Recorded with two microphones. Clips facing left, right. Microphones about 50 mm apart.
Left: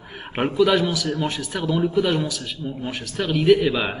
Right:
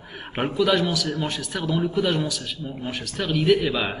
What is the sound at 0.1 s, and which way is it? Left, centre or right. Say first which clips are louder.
A man's voice: left 2 dB; centre.